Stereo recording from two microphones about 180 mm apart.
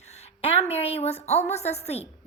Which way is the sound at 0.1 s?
35° left (ahead or behind).